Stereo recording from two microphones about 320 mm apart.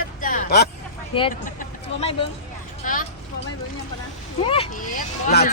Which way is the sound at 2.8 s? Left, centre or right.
Left.